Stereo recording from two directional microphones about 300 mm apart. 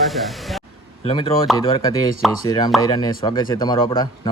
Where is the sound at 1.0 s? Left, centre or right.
Centre.